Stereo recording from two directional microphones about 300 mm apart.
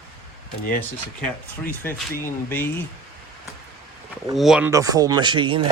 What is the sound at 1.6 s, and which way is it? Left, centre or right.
Speech, centre.